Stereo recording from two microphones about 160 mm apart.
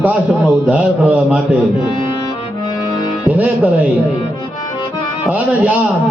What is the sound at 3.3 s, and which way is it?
Speech, 10° right (ahead or behind).